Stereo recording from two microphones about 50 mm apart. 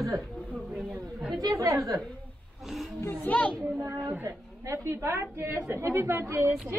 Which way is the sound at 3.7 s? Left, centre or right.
Right.